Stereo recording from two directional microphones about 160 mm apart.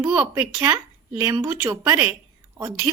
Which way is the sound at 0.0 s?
25° right (ahead or behind).